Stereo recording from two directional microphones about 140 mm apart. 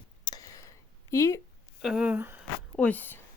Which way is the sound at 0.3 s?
25° left (ahead or behind).